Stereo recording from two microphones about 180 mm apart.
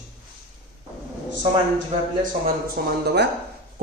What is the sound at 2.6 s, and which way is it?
Speech, 65° right (ahead or behind).